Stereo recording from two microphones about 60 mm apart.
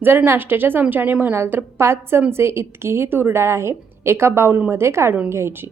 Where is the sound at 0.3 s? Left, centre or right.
Right.